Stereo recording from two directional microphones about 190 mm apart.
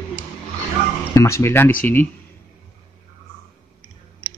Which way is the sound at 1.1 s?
15° left (ahead or behind).